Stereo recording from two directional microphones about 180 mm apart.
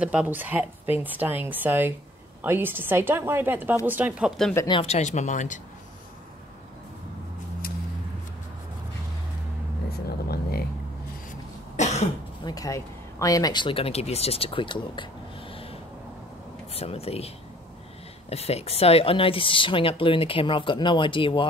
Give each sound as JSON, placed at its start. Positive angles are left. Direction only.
{"t": 0.0, "sound": "speech", "side_deg": -5}
{"t": 4.6, "sound": "speech", "side_deg": 25}
{"t": 4.8, "sound": "speech", "side_deg": 40}
{"t": 9.8, "sound": "vehicle", "side_deg": 60}
{"t": 11.7, "sound": "cough", "side_deg": 40}
{"t": 12.4, "sound": "speech", "side_deg": 20}
{"t": 18.3, "sound": "speech", "side_deg": 35}